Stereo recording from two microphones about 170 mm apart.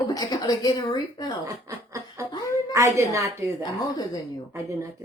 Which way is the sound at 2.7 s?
15° right (ahead or behind).